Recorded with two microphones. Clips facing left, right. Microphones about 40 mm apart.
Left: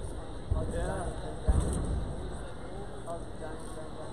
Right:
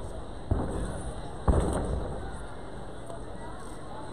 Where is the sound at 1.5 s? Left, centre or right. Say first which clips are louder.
Right 7 dB; right.